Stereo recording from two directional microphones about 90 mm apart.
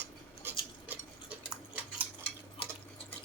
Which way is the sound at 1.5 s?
15° right (ahead or behind).